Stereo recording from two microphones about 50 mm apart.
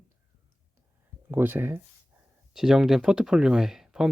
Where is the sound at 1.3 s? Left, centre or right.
Right.